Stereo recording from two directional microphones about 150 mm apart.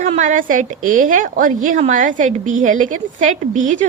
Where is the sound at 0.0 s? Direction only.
55° right (ahead or behind).